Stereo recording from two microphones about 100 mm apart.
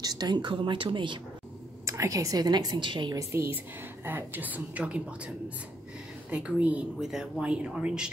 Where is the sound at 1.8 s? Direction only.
30° right (ahead or behind); by 3.2 s 50° right (ahead or behind).